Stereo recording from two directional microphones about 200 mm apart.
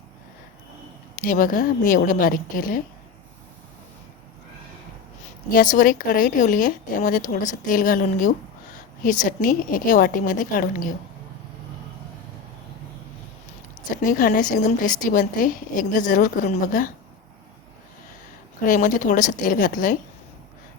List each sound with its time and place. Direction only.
1.2 s a woman's voice: 45° left (ahead or behind)
5.5 s a woman's voice: 45° left (ahead or behind)
13.9 s a woman's voice: 45° left (ahead or behind)
18.6 s a woman's voice: 40° left (ahead or behind)